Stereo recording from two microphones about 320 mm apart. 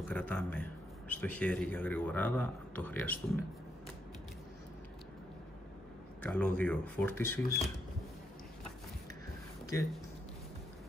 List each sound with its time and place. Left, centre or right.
0.1 s a man's voice: centre
6.2 s a man's voice: centre